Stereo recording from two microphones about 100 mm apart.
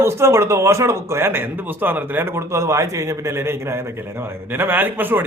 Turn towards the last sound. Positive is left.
turn(degrees=-20)  # may be behind; listen again after turning